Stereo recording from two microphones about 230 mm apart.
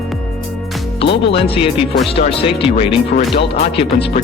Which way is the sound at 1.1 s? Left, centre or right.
Left.